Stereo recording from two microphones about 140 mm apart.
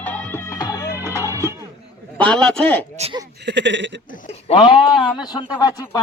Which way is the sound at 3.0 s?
50° right (ahead or behind).